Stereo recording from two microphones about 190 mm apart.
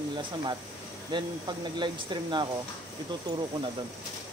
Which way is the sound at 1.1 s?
25° right (ahead or behind).